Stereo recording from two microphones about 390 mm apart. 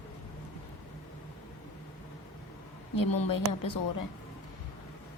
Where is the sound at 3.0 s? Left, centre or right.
Left.